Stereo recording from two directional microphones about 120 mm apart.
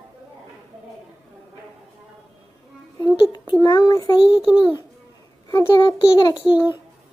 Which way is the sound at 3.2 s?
40° left (ahead or behind).